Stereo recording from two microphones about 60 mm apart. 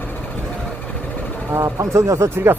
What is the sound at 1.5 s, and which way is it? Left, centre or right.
Speech, right.